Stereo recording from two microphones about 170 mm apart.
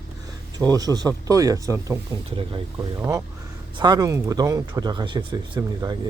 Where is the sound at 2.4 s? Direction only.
30° right (ahead or behind).